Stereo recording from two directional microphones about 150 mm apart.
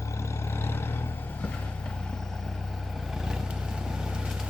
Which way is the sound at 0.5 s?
15° left (ahead or behind).